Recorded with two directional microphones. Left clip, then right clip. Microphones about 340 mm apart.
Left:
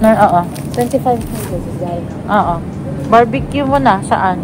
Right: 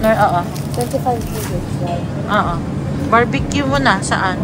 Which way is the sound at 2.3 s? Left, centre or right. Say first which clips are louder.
Left 4 dB; centre.